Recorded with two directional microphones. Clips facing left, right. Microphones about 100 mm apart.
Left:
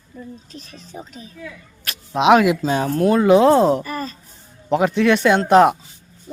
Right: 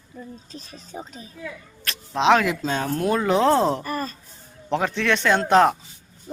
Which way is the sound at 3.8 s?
45° right (ahead or behind).